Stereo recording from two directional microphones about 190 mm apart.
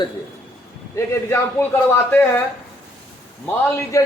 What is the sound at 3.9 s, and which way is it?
Speech, 15° left (ahead or behind).